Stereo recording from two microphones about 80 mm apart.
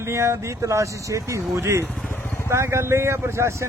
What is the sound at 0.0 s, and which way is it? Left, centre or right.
Speech, right.